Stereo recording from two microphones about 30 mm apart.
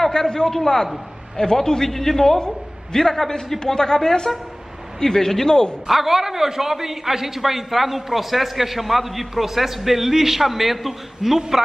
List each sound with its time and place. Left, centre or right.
0.1 s a woman's voice: left
1.9 s a man's voice: centre
5.9 s a man's voice: centre